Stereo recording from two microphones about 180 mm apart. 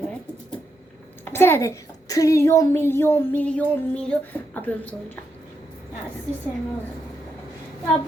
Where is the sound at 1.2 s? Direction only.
10° left (ahead or behind).